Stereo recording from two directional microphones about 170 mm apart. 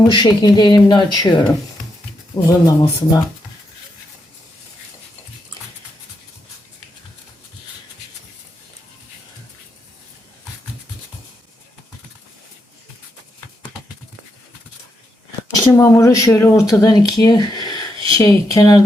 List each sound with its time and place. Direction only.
0.1 s speech: 25° left (ahead or behind)
15.7 s speech: 15° left (ahead or behind)